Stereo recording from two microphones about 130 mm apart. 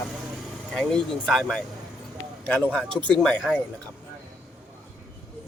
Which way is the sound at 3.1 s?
5° left (ahead or behind).